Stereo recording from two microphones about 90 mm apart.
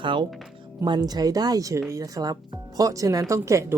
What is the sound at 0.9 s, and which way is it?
Speech, 50° right (ahead or behind).